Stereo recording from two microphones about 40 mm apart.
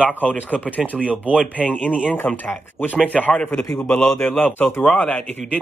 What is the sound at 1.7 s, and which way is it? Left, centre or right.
Speech, left.